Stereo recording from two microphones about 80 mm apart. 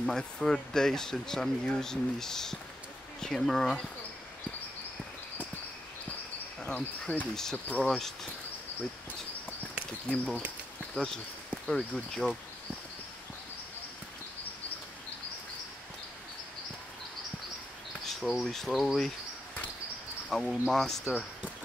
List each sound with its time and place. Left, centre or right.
0.0 s speech: centre
6.7 s speech: centre
10.0 s speech: centre
11.6 s speech: centre
18.0 s speech: centre
20.2 s speech: centre